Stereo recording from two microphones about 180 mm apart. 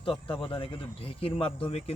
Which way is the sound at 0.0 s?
30° left (ahead or behind).